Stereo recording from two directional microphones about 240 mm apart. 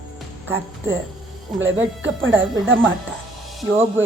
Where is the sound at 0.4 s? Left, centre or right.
Centre.